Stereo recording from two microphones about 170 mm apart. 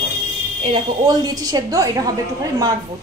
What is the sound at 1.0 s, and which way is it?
A woman's voice, 20° right (ahead or behind).